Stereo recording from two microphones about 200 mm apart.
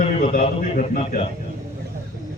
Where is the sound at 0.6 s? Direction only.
40° left (ahead or behind).